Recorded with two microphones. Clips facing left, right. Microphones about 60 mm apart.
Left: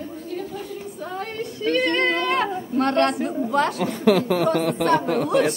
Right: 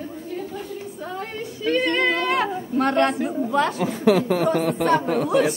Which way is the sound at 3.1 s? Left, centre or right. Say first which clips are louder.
Even; centre.